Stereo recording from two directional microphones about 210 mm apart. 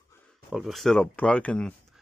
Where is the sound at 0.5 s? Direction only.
Centre (ahead or behind).